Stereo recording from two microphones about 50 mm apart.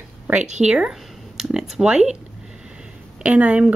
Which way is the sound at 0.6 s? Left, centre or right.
Right.